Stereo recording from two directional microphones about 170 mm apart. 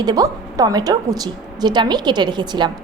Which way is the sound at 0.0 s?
20° right (ahead or behind).